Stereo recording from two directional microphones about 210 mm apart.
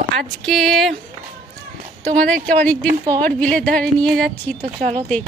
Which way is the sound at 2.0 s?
5° left (ahead or behind).